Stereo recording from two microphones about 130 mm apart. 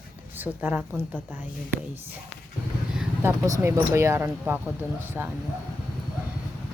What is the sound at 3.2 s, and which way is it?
A woman's voice, 20° right (ahead or behind).